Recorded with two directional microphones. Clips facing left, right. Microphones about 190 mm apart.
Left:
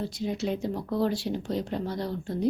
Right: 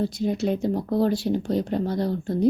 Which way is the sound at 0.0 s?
50° right (ahead or behind).